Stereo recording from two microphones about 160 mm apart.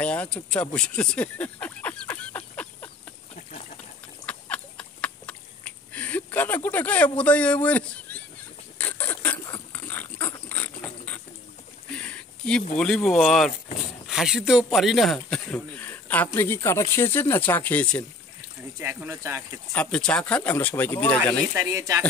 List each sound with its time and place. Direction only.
0.0 s speech: 5° left (ahead or behind)
0.7 s a sound: 5° left (ahead or behind)
4.3 s a sound: 10° left (ahead or behind)
8.7 s rodents: 10° left (ahead or behind)
9.7 s dog: 10° left (ahead or behind)
11.9 s a sound: 5° left (ahead or behind)
12.7 s a man's voice: 5° left (ahead or behind)
18.8 s speech: 15° right (ahead or behind)
19.7 s speech: 5° left (ahead or behind)
21.5 s speech: 20° right (ahead or behind)